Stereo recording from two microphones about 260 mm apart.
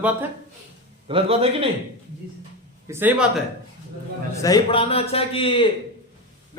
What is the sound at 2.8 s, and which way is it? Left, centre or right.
Speech, centre.